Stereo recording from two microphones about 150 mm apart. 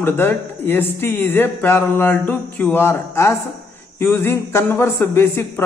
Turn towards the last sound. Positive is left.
turn(degrees=15)  # may be behind; listen again after turning